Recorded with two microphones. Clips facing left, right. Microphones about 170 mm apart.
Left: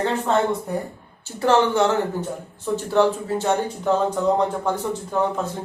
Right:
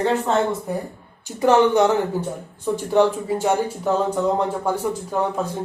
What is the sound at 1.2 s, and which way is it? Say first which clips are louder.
Speech: right 2 dB; 15° right (ahead or behind).